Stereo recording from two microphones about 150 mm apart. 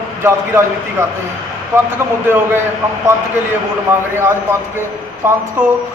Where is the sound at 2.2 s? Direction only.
15° right (ahead or behind).